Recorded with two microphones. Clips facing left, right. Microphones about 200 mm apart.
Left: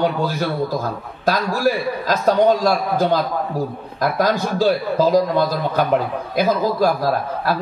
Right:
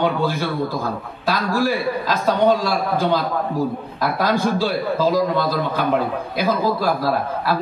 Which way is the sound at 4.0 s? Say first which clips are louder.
Left 2 dB; 45° left (ahead or behind).